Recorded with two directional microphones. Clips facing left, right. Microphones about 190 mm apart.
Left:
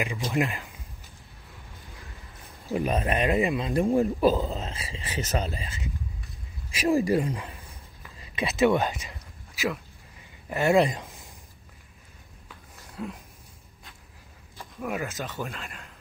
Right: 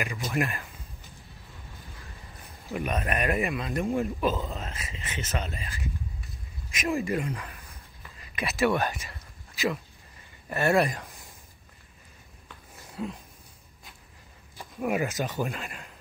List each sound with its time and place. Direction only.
0.0 s speech: 15° left (ahead or behind)
2.7 s speech: 30° left (ahead or behind)
3.2 s speech: 20° left (ahead or behind)
6.7 s speech: 30° left (ahead or behind)
10.5 s speech: 15° left (ahead or behind)
12.9 s a sound: centre (ahead or behind)
14.6 s speech: 15° right (ahead or behind)